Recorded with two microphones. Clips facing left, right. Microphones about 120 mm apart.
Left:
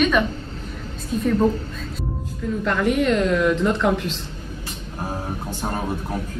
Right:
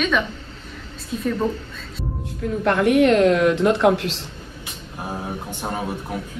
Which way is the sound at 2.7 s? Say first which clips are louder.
Right 4 dB; 65° right (ahead or behind).